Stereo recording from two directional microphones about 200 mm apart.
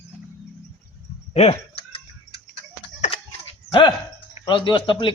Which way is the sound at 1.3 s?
30° left (ahead or behind).